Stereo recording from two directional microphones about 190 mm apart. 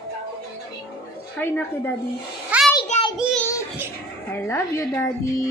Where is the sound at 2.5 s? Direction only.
5° right (ahead or behind).